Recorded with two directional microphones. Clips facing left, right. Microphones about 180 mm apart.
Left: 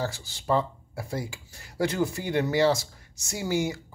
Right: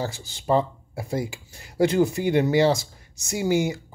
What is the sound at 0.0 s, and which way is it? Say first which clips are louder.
Speech: right 2 dB; 20° right (ahead or behind).